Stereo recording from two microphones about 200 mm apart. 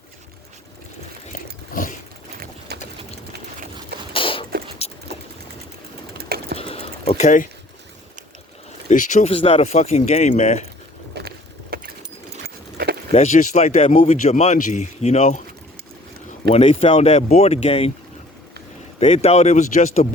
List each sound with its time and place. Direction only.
1.7 s a sound: 45° left (ahead or behind)
2.7 s sewing machine: 55° right (ahead or behind)
4.1 s a sound: 25° left (ahead or behind)
4.8 s boat: 30° left (ahead or behind)
6.1 s typing: 50° right (ahead or behind)
6.6 s a sound: 30° left (ahead or behind)
8.9 s speech: 40° left (ahead or behind)
11.1 s a sound: 55° right (ahead or behind)
12.7 s keys jangling: 55° right (ahead or behind)
13.1 s speech: 35° left (ahead or behind)
16.5 s speech: 25° left (ahead or behind)
18.9 s speech: 30° left (ahead or behind)